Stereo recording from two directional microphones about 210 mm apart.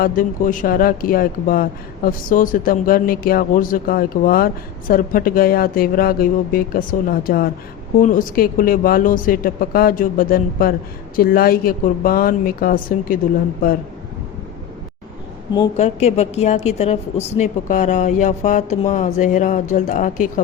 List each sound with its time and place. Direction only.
0.0 s a woman's voice: 40° left (ahead or behind)
15.8 s a woman's voice: 30° left (ahead or behind)